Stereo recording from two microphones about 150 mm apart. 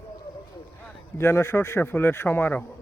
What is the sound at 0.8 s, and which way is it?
Speech, 15° left (ahead or behind).